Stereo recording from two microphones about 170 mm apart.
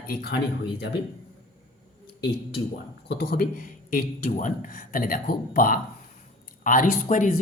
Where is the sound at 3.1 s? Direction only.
65° left (ahead or behind).